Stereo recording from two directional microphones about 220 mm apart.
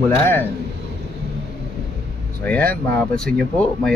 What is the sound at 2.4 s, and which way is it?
Speech, 10° left (ahead or behind).